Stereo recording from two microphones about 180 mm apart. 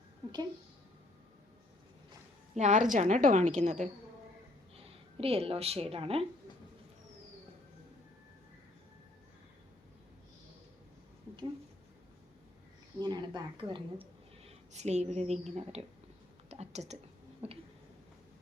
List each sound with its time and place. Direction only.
2.6 s a woman's voice: 45° right (ahead or behind)
13.0 s a woman's voice: 25° right (ahead or behind)
16.5 s a sound: 35° right (ahead or behind)